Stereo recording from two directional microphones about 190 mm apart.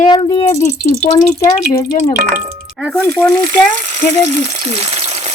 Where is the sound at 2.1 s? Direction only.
45° right (ahead or behind).